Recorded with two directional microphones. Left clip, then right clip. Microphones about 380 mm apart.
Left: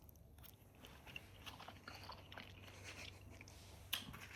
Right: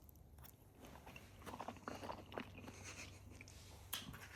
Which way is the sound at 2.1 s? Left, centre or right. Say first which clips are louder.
Right 5 dB; right.